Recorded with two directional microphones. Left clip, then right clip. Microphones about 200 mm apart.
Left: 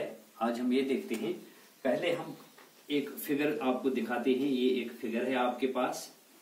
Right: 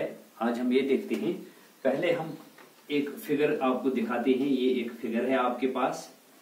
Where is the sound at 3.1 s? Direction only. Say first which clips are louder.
Right 5 dB; 10° right (ahead or behind).